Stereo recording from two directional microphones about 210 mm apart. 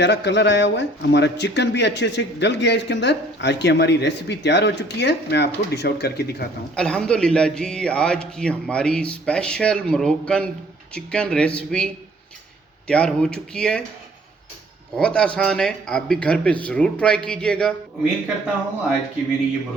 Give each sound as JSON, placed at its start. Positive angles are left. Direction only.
{"t": 0.0, "sound": "speech", "side_deg": 55}
{"t": 6.7, "sound": "a man's voice", "side_deg": 5}
{"t": 12.9, "sound": "a man's voice", "side_deg": 5}
{"t": 14.9, "sound": "a man's voice", "side_deg": 5}